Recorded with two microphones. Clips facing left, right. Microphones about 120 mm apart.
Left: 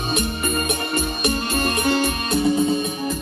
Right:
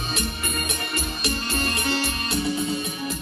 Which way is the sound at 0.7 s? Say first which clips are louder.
Left 6 dB; 50° left (ahead or behind).